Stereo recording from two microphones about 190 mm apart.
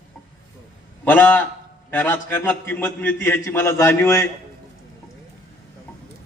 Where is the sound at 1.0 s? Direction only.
10° left (ahead or behind).